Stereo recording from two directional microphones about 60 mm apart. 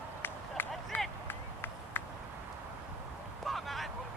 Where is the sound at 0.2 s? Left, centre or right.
Left.